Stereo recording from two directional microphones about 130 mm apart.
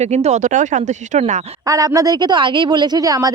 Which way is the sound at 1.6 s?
25° right (ahead or behind).